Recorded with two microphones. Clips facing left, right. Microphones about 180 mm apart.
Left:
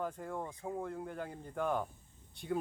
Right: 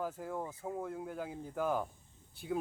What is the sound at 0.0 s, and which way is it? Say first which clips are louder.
Speech: right 1 dB; 5° right (ahead or behind).